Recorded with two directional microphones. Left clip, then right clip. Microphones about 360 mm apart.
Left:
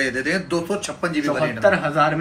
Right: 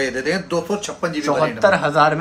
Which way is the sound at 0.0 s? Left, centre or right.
Right.